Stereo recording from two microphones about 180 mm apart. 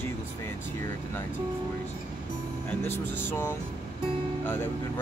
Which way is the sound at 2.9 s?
10° left (ahead or behind).